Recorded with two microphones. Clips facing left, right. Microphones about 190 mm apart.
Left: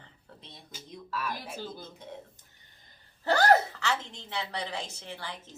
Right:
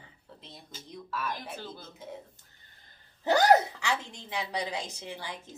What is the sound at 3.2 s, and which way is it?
A woman's voice, 15° right (ahead or behind).